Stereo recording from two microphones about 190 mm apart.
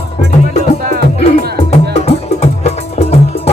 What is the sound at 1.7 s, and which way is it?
Music, 35° left (ahead or behind).